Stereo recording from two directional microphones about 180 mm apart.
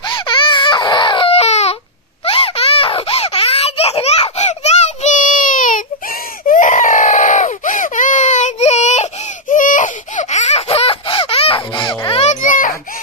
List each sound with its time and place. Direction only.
0.0 s baby cry: 25° left (ahead or behind)
2.2 s a sound: 30° left (ahead or behind)
12.2 s baby cry: 45° left (ahead or behind)